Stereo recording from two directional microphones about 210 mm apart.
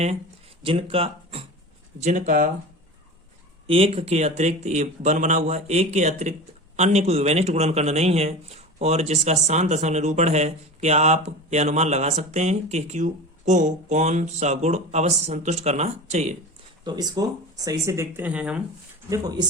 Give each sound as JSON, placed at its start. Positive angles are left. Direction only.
{"t": 0.6, "sound": "speech", "side_deg": -25}
{"t": 3.7, "sound": "speech", "side_deg": -25}
{"t": 16.8, "sound": "speech", "side_deg": -20}
{"t": 19.1, "sound": "speech", "side_deg": -20}